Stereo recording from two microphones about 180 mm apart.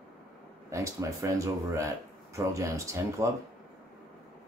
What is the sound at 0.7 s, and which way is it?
Speech, 15° right (ahead or behind).